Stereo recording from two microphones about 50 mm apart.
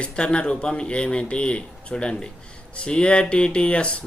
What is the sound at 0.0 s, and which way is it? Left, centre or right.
Speech, left.